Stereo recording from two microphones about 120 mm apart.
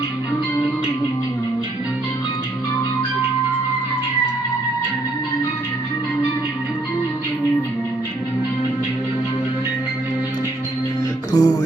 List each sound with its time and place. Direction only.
11.3 s music: 30° left (ahead or behind)